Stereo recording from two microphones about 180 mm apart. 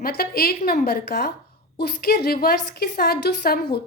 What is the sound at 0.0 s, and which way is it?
A woman's voice, 55° left (ahead or behind).